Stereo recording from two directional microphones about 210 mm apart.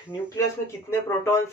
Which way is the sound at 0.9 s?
10° left (ahead or behind).